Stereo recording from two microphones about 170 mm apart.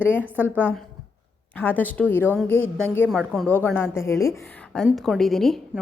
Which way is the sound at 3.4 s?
10° left (ahead or behind).